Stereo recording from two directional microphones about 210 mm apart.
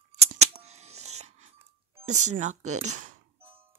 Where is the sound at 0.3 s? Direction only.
30° right (ahead or behind).